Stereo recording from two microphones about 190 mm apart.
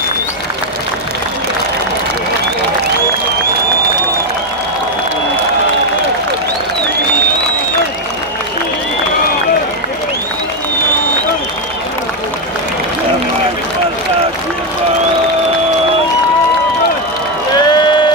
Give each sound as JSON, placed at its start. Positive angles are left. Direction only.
{"t": 17.6, "sound": "crowd", "side_deg": 20}